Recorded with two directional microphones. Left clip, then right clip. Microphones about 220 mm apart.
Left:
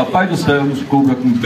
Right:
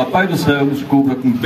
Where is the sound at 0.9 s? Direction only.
50° right (ahead or behind).